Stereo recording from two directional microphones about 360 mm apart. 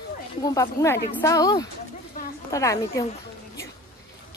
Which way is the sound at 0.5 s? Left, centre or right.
Centre.